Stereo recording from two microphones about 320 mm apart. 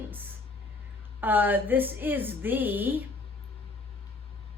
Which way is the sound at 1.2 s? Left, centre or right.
Centre.